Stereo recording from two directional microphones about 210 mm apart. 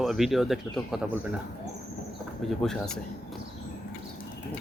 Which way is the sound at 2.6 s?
Centre (ahead or behind).